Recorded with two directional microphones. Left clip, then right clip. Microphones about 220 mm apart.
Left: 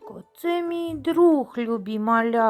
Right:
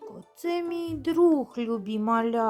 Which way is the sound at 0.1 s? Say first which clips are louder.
Left 5 dB; 15° left (ahead or behind).